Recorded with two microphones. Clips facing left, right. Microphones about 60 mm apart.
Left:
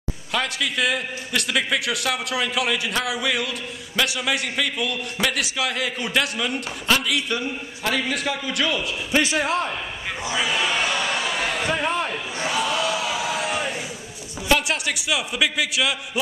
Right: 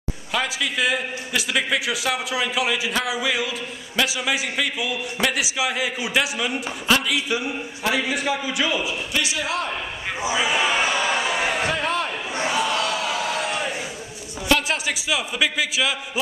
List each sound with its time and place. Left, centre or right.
0.3 s a man's voice: centre
9.2 s speech: left
10.2 s a sound: centre
11.7 s a man's voice: centre
12.4 s crowd: centre
14.7 s a man's voice: centre